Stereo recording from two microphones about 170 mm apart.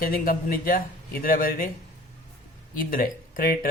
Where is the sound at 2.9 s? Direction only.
55° left (ahead or behind).